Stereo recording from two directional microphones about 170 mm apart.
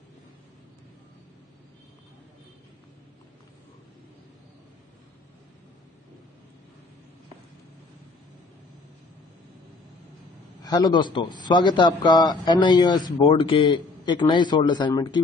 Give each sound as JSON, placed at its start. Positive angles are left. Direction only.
{"t": 10.6, "sound": "a man's voice", "side_deg": 25}